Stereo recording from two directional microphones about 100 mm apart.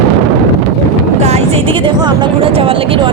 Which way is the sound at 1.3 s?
75° right (ahead or behind).